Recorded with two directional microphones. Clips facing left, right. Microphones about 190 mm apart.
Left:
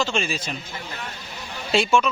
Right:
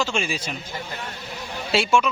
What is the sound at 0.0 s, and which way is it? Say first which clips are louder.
Speech: even; 10° right (ahead or behind).